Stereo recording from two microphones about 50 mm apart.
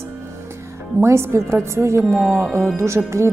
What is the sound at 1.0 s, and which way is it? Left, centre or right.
Speech, right.